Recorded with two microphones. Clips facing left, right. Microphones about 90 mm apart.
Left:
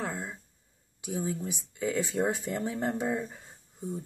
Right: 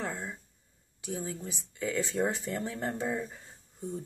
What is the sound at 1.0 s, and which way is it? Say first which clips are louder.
Speech: left 4 dB; 15° left (ahead or behind).